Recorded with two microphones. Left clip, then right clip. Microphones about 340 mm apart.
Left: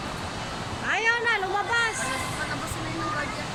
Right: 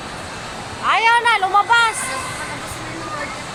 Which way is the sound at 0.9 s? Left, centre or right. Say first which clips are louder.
Right 10 dB; centre.